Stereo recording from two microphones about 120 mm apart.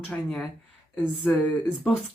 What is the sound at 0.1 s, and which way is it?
Speech, 5° left (ahead or behind).